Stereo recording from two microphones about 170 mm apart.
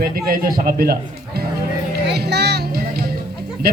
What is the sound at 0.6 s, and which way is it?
Speech, 60° right (ahead or behind).